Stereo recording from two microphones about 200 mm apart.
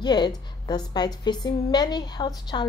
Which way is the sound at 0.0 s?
20° left (ahead or behind).